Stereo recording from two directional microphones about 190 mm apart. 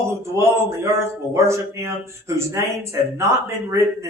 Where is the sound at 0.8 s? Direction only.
15° right (ahead or behind).